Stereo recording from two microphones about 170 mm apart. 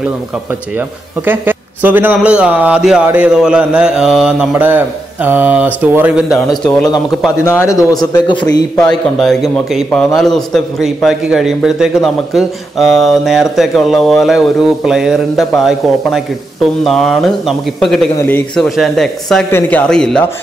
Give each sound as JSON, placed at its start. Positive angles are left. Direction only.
{"t": 1.2, "sound": "speech", "side_deg": -10}
{"t": 6.9, "sound": "a man's voice", "side_deg": 15}
{"t": 8.7, "sound": "a man's voice", "side_deg": 5}
{"t": 16.8, "sound": "a man's voice", "side_deg": 0}